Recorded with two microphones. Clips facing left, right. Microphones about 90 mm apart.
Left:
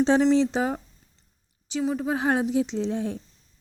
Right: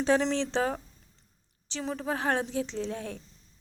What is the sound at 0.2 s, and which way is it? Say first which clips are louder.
A woman's voice: left 7 dB; 10° left (ahead or behind).